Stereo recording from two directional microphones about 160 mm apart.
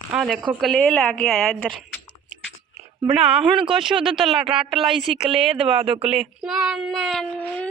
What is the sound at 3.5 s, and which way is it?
Speech, 30° right (ahead or behind).